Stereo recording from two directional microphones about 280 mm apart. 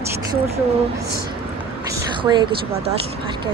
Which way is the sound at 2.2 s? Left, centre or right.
Centre.